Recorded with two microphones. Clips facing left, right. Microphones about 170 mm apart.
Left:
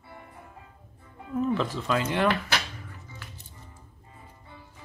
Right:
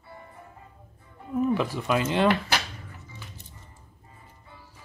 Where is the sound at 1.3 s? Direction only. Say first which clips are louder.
Right 2 dB; 10° right (ahead or behind).